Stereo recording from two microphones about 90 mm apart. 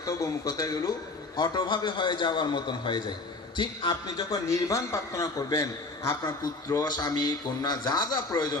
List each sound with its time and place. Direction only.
0.0 s a man's voice: 40° left (ahead or behind); by 4.4 s 60° left (ahead or behind)
4.5 s a man's voice: 35° left (ahead or behind)
6.8 s a man's voice: 50° left (ahead or behind)